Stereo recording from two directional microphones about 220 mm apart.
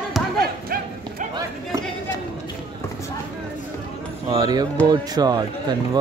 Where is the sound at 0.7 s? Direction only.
40° right (ahead or behind).